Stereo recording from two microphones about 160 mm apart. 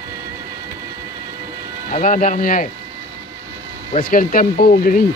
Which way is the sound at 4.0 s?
60° left (ahead or behind).